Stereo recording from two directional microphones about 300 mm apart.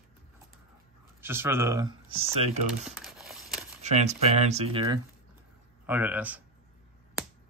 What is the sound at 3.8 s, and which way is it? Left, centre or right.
Speech, right.